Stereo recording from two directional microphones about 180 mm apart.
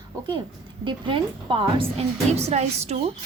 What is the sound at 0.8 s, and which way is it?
A woman's voice, 30° right (ahead or behind).